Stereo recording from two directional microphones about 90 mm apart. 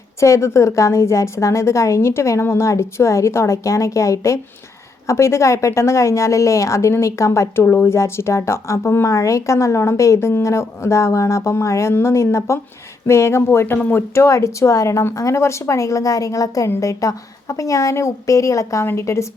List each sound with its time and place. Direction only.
0.2 s a woman's voice: 30° left (ahead or behind)